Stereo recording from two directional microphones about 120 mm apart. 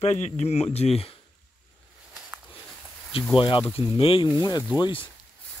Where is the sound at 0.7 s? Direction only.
60° left (ahead or behind).